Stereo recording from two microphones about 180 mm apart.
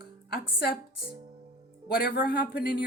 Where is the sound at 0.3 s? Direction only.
60° left (ahead or behind).